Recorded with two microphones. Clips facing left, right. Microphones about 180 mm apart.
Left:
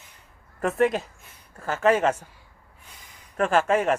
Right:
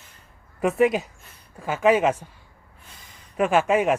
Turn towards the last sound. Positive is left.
turn(degrees=-5)  # may be behind; listen again after turning